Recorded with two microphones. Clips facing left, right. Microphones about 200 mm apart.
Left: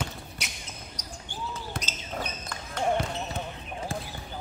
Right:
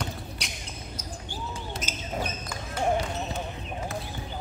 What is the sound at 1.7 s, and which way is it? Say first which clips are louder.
Basketball bounce: even; 55° left (ahead or behind).